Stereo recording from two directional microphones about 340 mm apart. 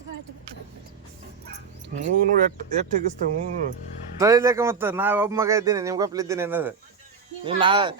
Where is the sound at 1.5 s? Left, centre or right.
Right.